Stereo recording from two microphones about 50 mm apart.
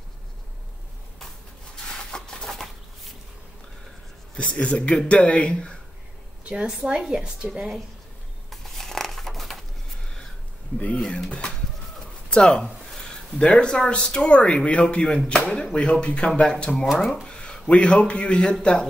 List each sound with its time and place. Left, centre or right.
1.9 s a sound: centre
4.4 s speech: left
6.5 s a woman's voice: centre
8.5 s a sound: centre
11.2 s speech: left
16.7 s speech: centre
17.3 s a man's voice: centre